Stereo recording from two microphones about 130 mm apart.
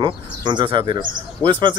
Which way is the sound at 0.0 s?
35° right (ahead or behind).